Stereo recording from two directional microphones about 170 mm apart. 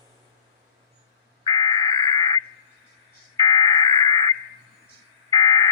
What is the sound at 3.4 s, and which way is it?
Telephone, 20° left (ahead or behind).